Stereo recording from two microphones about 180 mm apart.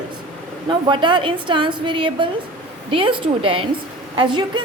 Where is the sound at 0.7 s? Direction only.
25° right (ahead or behind).